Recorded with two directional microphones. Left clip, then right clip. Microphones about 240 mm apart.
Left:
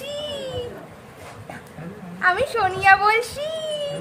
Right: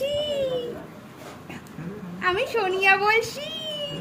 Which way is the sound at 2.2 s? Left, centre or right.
Centre.